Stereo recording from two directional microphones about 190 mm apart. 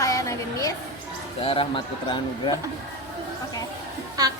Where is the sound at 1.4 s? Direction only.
30° left (ahead or behind).